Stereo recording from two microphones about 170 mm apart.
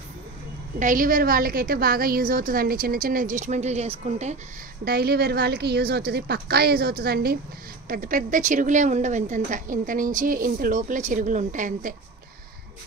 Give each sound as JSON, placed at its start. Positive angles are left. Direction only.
{"t": 0.7, "sound": "a woman's voice", "side_deg": -50}
{"t": 4.8, "sound": "a woman's voice", "side_deg": -65}
{"t": 7.9, "sound": "a woman's voice", "side_deg": -55}